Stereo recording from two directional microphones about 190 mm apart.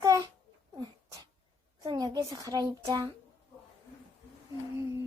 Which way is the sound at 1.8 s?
25° right (ahead or behind).